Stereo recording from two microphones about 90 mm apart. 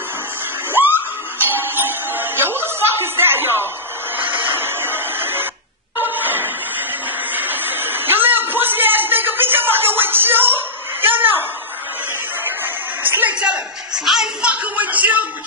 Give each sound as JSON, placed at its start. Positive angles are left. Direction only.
{"t": 0.7, "sound": "music", "side_deg": -25}
{"t": 4.2, "sound": "printer", "side_deg": -20}
{"t": 5.9, "sound": "a sound", "side_deg": -20}
{"t": 12.4, "sound": "music", "side_deg": -25}
{"t": 13.4, "sound": "music", "side_deg": -10}